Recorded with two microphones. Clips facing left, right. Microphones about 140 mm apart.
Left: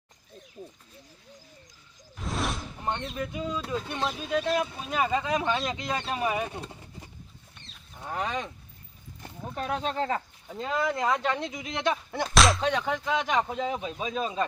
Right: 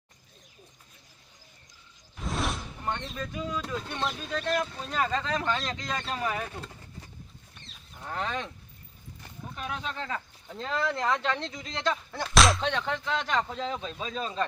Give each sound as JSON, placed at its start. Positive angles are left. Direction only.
{"t": 2.1, "sound": "whoosh", "side_deg": 0}
{"t": 2.8, "sound": "a sound", "side_deg": 20}
{"t": 3.8, "sound": "speech", "side_deg": 5}
{"t": 9.7, "sound": "speech", "side_deg": 35}
{"t": 10.5, "sound": "speech", "side_deg": 10}
{"t": 12.3, "sound": "speech", "side_deg": 0}